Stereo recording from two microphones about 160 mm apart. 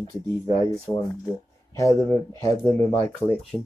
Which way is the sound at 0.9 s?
20° left (ahead or behind).